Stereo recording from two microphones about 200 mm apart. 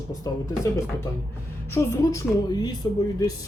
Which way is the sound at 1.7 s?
15° left (ahead or behind).